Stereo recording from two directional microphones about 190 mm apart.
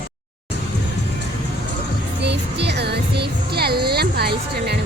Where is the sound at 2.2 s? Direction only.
65° right (ahead or behind).